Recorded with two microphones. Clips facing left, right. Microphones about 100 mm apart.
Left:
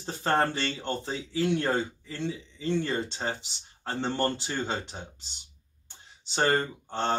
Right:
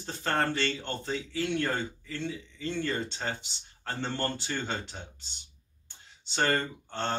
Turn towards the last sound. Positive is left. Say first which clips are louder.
# left 4 dB
turn(degrees=20)  # may be behind; listen again after turning